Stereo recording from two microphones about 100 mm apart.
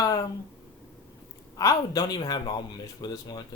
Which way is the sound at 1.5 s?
40° left (ahead or behind).